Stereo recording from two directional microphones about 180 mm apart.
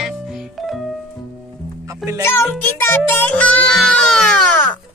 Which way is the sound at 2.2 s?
15° left (ahead or behind).